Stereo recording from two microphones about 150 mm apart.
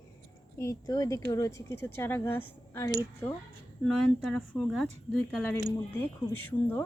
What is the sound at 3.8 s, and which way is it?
Speech, 5° left (ahead or behind).